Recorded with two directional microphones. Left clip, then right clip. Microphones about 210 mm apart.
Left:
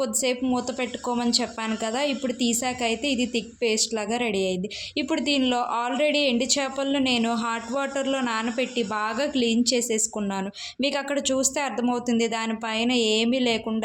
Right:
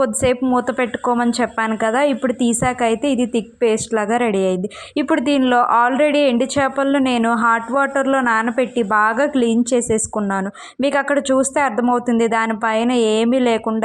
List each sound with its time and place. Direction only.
0.0 s a woman's voice: 25° right (ahead or behind)